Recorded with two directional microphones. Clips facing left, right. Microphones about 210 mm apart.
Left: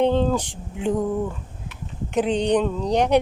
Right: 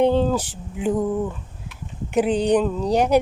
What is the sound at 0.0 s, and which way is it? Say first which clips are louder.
Speech: right 1 dB; 10° right (ahead or behind).